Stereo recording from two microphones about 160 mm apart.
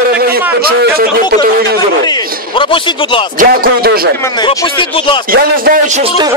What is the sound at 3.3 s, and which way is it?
Speech, 70° right (ahead or behind).